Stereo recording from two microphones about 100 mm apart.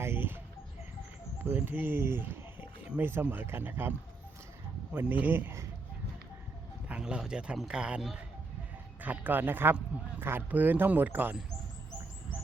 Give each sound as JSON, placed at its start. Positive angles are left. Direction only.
{"t": 0.0, "sound": "bird", "side_deg": -20}
{"t": 1.5, "sound": "speech", "side_deg": -20}
{"t": 6.8, "sound": "a man's voice", "side_deg": -10}